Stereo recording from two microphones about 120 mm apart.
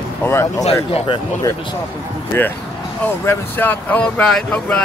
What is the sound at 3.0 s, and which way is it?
Speech, 20° left (ahead or behind).